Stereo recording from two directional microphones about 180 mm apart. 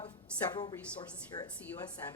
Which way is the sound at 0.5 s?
20° left (ahead or behind).